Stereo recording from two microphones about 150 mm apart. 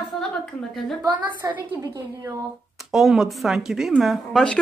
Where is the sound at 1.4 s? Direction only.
15° right (ahead or behind).